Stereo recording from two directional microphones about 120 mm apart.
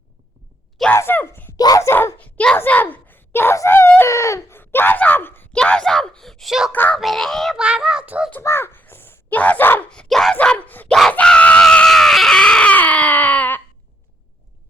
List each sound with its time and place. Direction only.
0.9 s speech: 15° left (ahead or behind)
1.5 s a child's voice: 30° left (ahead or behind)
5.5 s a child's voice: 5° left (ahead or behind)
6.7 s speech: 15° left (ahead or behind)
7.0 s a child's voice: centre (ahead or behind)
8.3 s speech: 20° left (ahead or behind)
11.1 s screaming: 10° left (ahead or behind)